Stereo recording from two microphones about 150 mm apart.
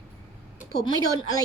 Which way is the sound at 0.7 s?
25° left (ahead or behind).